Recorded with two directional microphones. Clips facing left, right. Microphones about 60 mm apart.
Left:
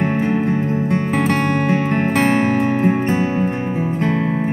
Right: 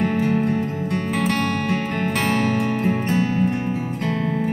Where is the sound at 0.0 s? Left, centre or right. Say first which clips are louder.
Left 2 dB; left.